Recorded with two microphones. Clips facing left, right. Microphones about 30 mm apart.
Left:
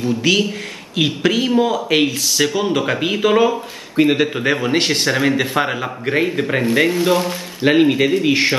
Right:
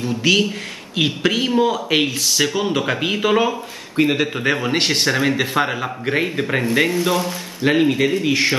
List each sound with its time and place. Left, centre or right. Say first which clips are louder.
0.0 s speech: left 1 dB; centre
7.2 s speech: left 2 dB; centre